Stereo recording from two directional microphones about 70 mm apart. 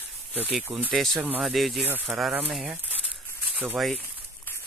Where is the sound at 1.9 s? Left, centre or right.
Right.